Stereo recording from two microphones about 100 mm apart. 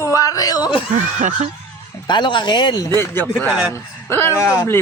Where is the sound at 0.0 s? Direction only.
35° left (ahead or behind).